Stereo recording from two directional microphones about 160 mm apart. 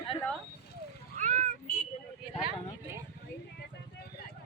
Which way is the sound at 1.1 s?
55° right (ahead or behind).